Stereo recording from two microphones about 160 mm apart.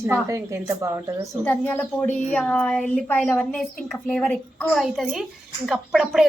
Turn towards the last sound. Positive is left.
turn(degrees=0)  # may be behind; listen again after turning